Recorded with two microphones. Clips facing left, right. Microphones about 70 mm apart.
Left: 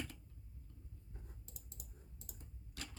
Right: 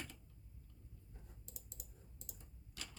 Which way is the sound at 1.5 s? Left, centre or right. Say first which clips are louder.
Left 1 dB; left.